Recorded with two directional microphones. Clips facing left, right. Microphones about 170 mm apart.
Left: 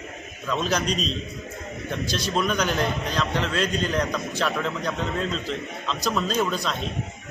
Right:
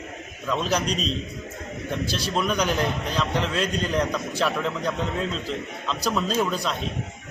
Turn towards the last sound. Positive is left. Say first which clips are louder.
# even
turn(degrees=-5)  # may be behind; listen again after turning